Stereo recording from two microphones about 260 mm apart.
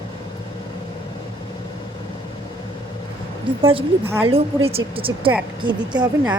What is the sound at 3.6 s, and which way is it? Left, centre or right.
A woman's voice, right.